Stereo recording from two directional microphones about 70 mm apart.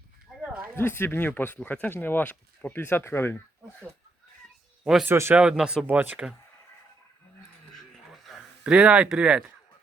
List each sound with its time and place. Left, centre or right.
0.8 s speech: left
4.9 s speech: centre
5.3 s speech: centre
7.7 s a sound: centre
8.4 s speech: centre